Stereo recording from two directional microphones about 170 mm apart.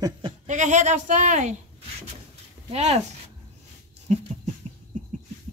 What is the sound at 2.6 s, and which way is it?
Speech, 40° right (ahead or behind).